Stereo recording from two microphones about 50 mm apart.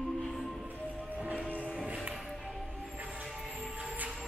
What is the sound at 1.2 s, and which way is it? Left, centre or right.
Music, right.